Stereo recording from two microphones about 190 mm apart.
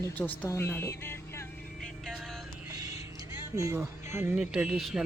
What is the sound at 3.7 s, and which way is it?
Speech, 10° right (ahead or behind).